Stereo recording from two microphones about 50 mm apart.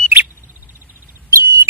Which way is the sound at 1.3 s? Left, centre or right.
Right.